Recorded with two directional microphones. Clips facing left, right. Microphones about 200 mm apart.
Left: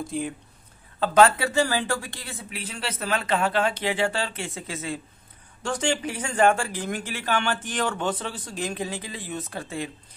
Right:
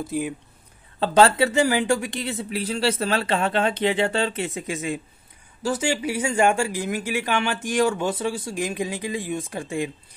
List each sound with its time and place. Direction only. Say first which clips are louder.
0.0 s speech: right 3 dB; 5° right (ahead or behind)
0.9 s speech: right 1 dB; 30° right (ahead or behind)
2.5 s speech: right 10 dB; 35° right (ahead or behind); by 9.8 s 15° right (ahead or behind)